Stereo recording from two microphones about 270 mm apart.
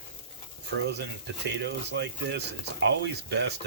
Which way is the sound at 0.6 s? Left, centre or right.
Right.